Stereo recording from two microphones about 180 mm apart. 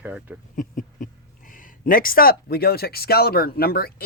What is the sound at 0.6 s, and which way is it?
Speech, 45° left (ahead or behind).